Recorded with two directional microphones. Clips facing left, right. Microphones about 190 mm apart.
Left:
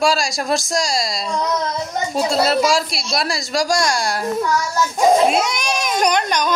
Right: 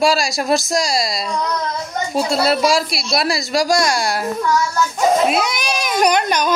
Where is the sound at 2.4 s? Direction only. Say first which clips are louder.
Right 2 dB; 5° right (ahead or behind).